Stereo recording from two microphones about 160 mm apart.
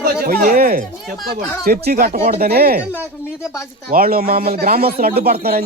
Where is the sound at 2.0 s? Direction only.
45° right (ahead or behind).